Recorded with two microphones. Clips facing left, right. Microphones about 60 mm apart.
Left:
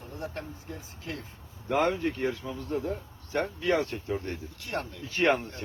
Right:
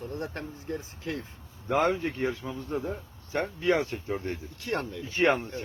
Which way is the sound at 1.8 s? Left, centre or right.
Right.